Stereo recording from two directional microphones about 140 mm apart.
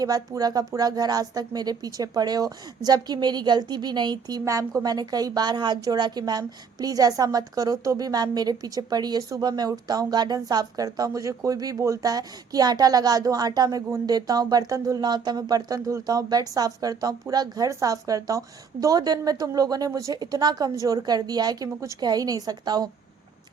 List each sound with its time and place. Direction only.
0.0 s speech: 25° right (ahead or behind)